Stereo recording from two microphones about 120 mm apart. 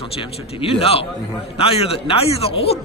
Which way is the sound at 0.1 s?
50° left (ahead or behind).